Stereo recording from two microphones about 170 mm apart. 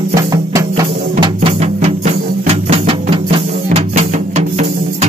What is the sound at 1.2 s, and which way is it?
Music, 35° right (ahead or behind).